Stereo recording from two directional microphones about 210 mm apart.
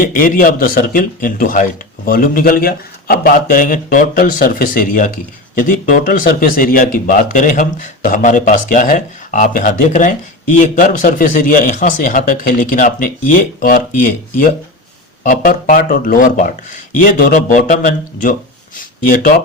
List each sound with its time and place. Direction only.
0.0 s speech: 40° left (ahead or behind)
15.2 s speech: 40° left (ahead or behind)